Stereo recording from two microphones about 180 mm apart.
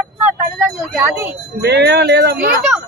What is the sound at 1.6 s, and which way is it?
Speech, 65° right (ahead or behind).